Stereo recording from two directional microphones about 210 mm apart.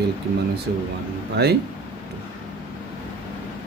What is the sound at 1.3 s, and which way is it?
Speech, 50° right (ahead or behind).